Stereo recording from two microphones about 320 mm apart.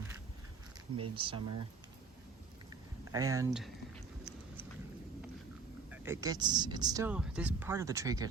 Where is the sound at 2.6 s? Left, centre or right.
Centre.